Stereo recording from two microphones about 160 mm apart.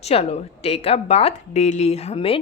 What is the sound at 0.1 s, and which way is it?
Speech, 40° left (ahead or behind).